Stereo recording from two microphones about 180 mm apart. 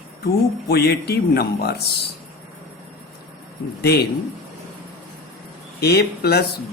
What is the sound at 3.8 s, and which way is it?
Speech, 60° left (ahead or behind).